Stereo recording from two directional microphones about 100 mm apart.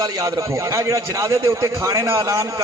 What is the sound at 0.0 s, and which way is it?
Speech, 35° right (ahead or behind).